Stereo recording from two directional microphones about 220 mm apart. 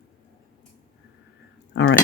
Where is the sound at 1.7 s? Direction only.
55° left (ahead or behind).